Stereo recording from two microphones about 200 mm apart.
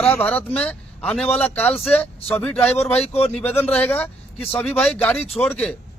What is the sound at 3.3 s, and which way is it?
Speech, 10° left (ahead or behind).